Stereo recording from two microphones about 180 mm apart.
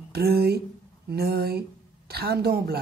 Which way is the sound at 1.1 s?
60° right (ahead or behind).